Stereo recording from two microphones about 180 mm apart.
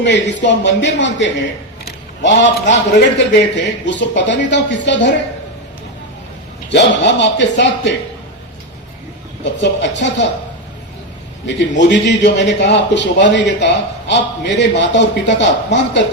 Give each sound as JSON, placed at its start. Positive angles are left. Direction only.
{"t": 0.0, "sound": "speech", "side_deg": 80}
{"t": 1.8, "sound": "a sound", "side_deg": 85}
{"t": 3.3, "sound": "a man's voice", "side_deg": 75}
{"t": 6.7, "sound": "a man's voice", "side_deg": 75}
{"t": 9.4, "sound": "speech", "side_deg": 80}
{"t": 11.4, "sound": "a man's voice", "side_deg": 80}